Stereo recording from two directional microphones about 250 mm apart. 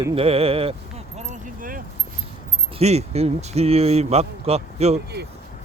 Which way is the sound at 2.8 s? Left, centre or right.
Right.